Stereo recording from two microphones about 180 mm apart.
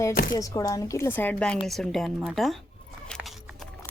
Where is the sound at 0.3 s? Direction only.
20° left (ahead or behind); by 2.6 s centre (ahead or behind).